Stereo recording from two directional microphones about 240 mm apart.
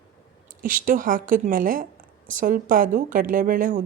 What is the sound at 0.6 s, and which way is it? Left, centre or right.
A woman's voice, right.